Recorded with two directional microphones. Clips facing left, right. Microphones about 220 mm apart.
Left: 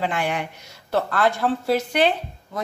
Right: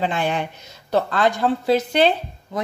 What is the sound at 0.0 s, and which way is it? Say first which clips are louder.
A woman's voice: right 2 dB; 25° right (ahead or behind).